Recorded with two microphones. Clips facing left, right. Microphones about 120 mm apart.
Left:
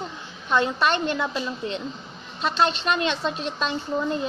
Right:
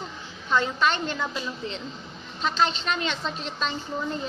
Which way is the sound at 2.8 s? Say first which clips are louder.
Left 4 dB; 15° left (ahead or behind).